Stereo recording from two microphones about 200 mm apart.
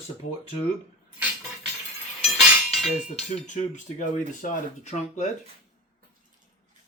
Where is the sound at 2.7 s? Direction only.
Centre (ahead or behind).